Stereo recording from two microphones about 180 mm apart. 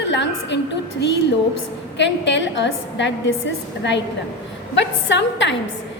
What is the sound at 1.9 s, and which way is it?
A woman's voice, 80° left.